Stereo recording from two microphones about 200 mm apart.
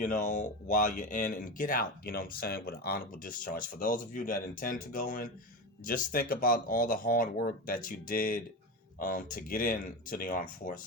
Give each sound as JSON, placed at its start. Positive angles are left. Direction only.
{"t": 0.0, "sound": "speech", "side_deg": 40}